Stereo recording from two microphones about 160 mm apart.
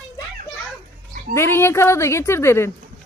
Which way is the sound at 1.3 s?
15° left (ahead or behind).